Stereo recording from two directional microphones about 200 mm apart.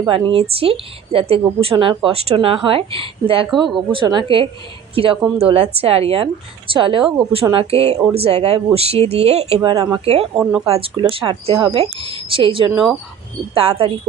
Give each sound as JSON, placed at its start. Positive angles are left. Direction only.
{"t": 0.0, "sound": "a woman's voice", "side_deg": -25}
{"t": 3.4, "sound": "speech", "side_deg": 0}
{"t": 3.9, "sound": "a woman's voice", "side_deg": -25}
{"t": 10.3, "sound": "speech", "side_deg": -5}
{"t": 10.7, "sound": "a woman's voice", "side_deg": -30}